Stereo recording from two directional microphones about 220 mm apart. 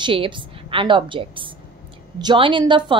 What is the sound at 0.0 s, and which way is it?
A woman's voice, 25° right (ahead or behind).